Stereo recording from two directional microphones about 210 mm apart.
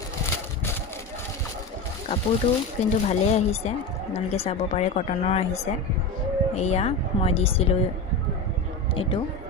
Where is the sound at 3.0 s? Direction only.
30° left (ahead or behind).